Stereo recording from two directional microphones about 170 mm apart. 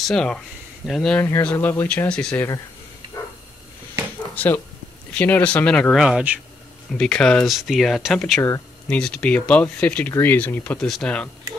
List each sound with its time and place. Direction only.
0.0 s speech: 5° left (ahead or behind)
3.1 s a sound: 20° left (ahead or behind)
5.1 s speech: 10° left (ahead or behind); by 6.4 s 5° right (ahead or behind)
6.9 s speech: 5° left (ahead or behind)
8.4 s speech: 15° left (ahead or behind)
8.8 s speech: 5° left (ahead or behind)